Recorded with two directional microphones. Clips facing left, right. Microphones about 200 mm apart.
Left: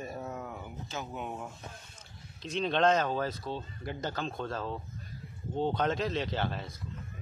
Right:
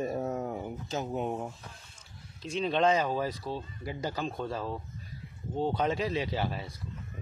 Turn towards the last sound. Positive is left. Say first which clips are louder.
# right 1 dB
turn(degrees=-10)  # may be behind; listen again after turning